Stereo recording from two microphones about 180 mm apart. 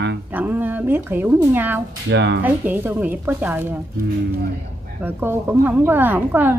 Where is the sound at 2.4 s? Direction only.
10° right (ahead or behind).